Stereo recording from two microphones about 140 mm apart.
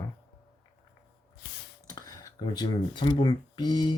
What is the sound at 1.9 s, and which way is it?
Speech, 25° left (ahead or behind).